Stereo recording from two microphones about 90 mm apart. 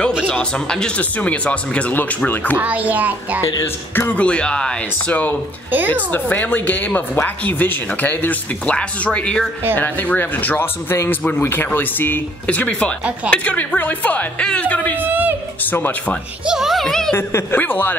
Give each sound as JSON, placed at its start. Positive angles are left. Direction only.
{"t": 0.3, "sound": "speech", "side_deg": 10}
{"t": 2.5, "sound": "a child's voice", "side_deg": -15}
{"t": 3.6, "sound": "speech", "side_deg": 25}
{"t": 5.7, "sound": "a woman's voice", "side_deg": -20}
{"t": 6.1, "sound": "speech", "side_deg": 20}
{"t": 15.0, "sound": "a woman's voice", "side_deg": -20}
{"t": 15.6, "sound": "speech", "side_deg": 20}
{"t": 16.4, "sound": "speech", "side_deg": -5}
{"t": 17.1, "sound": "speech", "side_deg": 30}